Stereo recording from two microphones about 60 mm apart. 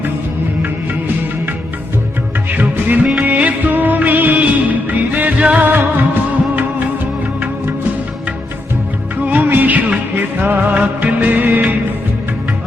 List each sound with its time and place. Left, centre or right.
2.6 s music: right
3.2 s music of bollywood: right
9.2 s music of bollywood: right
10.2 s music: right